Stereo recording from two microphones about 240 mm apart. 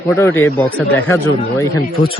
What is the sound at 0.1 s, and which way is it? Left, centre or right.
Speech, centre.